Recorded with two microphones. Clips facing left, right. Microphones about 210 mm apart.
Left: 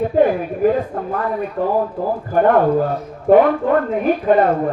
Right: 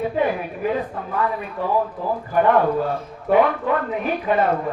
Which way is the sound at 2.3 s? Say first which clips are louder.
Left 4 dB; 45° left (ahead or behind).